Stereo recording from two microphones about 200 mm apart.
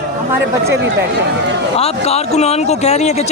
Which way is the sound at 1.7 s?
30° left (ahead or behind).